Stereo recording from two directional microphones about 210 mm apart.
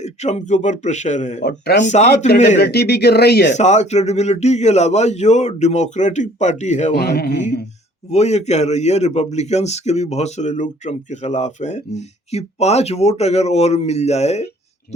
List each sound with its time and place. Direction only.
0.0 s a man's voice: 30° left (ahead or behind)
1.5 s speech: 50° left (ahead or behind)
1.8 s a man's voice: 35° left (ahead or behind)
2.6 s speech: 50° left (ahead or behind)
3.5 s a man's voice: 30° left (ahead or behind)
6.9 s speech: 50° left (ahead or behind)
8.1 s a man's voice: 30° left (ahead or behind)